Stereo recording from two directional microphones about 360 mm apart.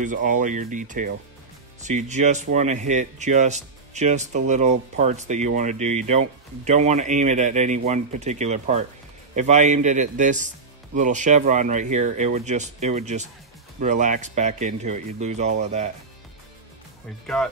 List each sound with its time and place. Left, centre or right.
0.0 s speech: right